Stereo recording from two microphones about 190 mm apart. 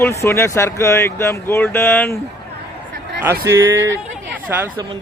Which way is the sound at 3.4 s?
15° right (ahead or behind).